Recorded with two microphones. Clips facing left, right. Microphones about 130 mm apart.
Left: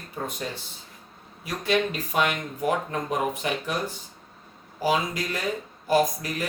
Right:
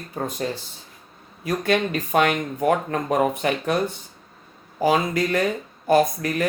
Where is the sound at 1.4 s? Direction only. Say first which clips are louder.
Right 3 dB; 55° right (ahead or behind).